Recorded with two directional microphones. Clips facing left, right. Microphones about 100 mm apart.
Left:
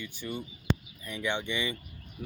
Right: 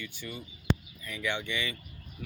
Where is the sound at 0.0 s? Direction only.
20° left (ahead or behind).